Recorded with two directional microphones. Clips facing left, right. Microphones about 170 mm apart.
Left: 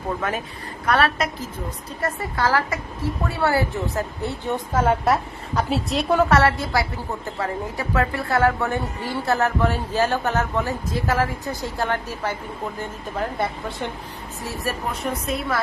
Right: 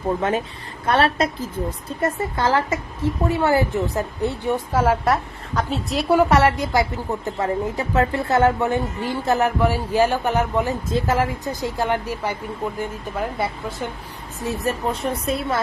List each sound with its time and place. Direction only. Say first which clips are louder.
0.2 s a woman's voice: right 5 dB; 25° right (ahead or behind); by 13.9 s centre (ahead or behind)
14.4 s speech: right 5 dB; 20° right (ahead or behind)